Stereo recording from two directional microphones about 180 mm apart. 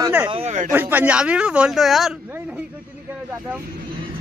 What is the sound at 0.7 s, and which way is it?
Speech, 10° right (ahead or behind).